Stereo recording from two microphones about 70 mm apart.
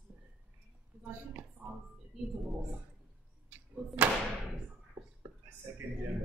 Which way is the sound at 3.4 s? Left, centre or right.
Right.